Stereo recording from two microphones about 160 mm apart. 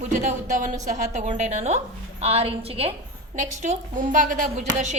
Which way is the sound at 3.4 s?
50° right (ahead or behind).